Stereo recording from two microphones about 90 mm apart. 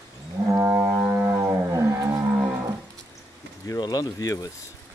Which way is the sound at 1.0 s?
25° right (ahead or behind).